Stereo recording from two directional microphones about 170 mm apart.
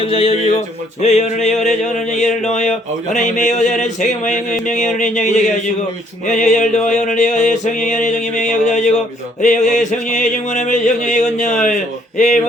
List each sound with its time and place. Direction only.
0.0 s speech: 35° left (ahead or behind)
1.0 s a sound: 40° left (ahead or behind)
11.6 s speech: 45° left (ahead or behind)